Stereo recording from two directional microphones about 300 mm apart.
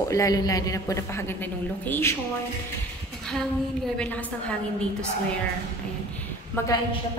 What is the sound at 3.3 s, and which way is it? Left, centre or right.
A woman's voice, centre.